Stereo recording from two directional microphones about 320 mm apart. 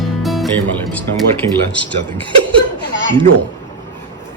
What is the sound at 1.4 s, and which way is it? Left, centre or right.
Speech, right.